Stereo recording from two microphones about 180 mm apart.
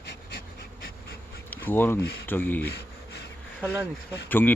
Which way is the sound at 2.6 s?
65° left (ahead or behind).